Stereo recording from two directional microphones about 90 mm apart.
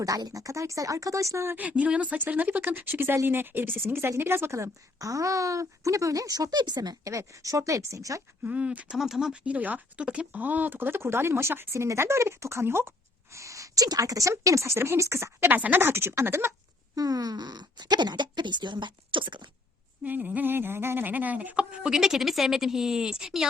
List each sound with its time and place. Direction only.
0.0 s a woman's voice: 45° right (ahead or behind)
1.5 s a woman's voice: 15° right (ahead or behind); by 8.2 s 40° right (ahead or behind)
8.4 s speech: 15° right (ahead or behind)
9.0 s a woman's voice: 5° right (ahead or behind); by 16.6 s 30° right (ahead or behind)
16.9 s speech: 45° right (ahead or behind); by 19.5 s 65° right (ahead or behind)
20.1 s speech: 20° right (ahead or behind)